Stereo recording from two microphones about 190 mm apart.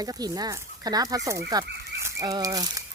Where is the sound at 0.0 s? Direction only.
20° right (ahead or behind).